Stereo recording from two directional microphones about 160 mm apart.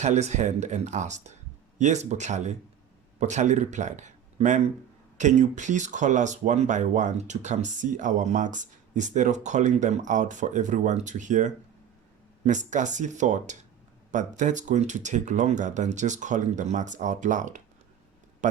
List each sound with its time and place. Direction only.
0.0 s speech: 45° right (ahead or behind)